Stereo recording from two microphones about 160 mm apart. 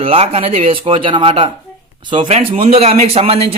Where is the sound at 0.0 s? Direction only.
35° right (ahead or behind).